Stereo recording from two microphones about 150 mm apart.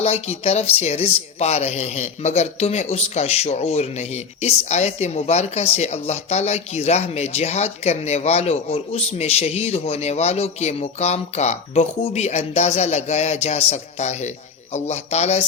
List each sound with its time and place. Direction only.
0.0 s a woman's voice: 45° left (ahead or behind)